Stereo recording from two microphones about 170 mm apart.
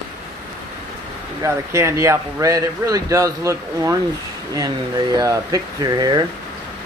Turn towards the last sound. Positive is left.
turn(degrees=-25)  # may be behind; listen again after turning